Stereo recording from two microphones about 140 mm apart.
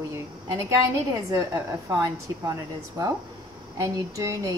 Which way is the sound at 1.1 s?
20° right (ahead or behind).